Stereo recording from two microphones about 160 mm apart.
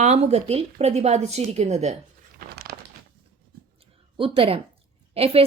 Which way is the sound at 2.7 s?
70° right (ahead or behind).